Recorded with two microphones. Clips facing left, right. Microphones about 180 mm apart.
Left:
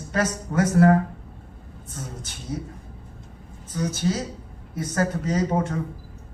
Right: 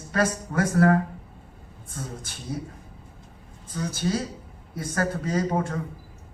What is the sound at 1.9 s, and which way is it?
Speech, 25° left (ahead or behind).